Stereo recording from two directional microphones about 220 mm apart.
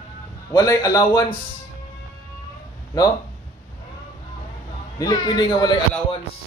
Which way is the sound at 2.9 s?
15° left (ahead or behind).